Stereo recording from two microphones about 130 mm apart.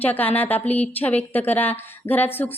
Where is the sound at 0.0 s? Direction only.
15° left (ahead or behind).